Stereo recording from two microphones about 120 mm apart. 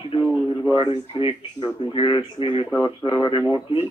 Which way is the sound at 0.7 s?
45° left (ahead or behind).